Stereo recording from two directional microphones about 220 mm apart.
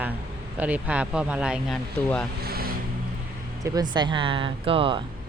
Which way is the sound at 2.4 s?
45° right (ahead or behind).